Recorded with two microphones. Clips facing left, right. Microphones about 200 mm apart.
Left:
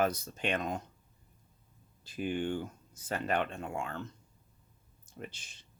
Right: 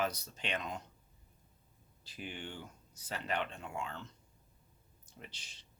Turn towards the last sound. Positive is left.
turn(degrees=50)  # may be behind; listen again after turning